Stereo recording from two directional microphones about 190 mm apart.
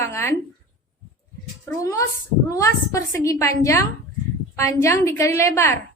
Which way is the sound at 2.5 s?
15° left (ahead or behind).